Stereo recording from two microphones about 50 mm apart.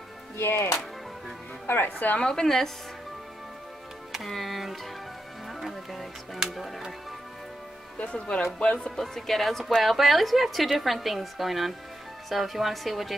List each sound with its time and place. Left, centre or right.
0.4 s speech: left
1.7 s a woman's voice: left
2.1 s speech: centre
4.1 s a woman's voice: centre
5.6 s music: centre
8.0 s speech: left
8.7 s a woman's voice: centre